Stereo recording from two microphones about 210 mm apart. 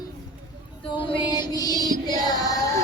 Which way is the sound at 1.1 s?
20° left (ahead or behind).